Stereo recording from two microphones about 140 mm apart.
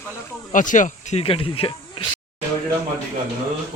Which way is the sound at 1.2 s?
40° left (ahead or behind).